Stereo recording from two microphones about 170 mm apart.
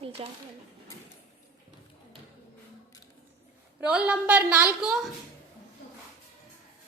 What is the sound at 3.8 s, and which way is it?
A woman's voice, 10° right (ahead or behind).